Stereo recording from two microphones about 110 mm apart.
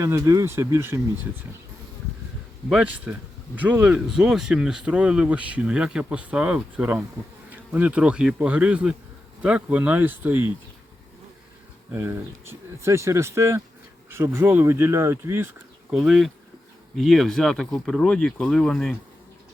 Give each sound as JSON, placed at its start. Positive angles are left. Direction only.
{"t": 0.0, "sound": "speech", "side_deg": -25}
{"t": 2.6, "sound": "speech", "side_deg": -10}
{"t": 11.9, "sound": "speech", "side_deg": -25}
{"t": 15.9, "sound": "speech", "side_deg": -5}